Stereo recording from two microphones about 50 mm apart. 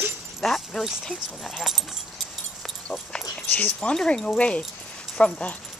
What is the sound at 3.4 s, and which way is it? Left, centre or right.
Speech, left.